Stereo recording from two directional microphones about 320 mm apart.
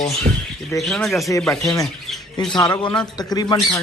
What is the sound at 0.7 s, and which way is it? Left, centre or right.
A man's voice, centre.